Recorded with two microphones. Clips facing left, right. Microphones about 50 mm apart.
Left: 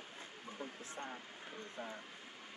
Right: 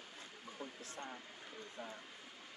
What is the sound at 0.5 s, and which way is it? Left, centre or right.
Speech, left.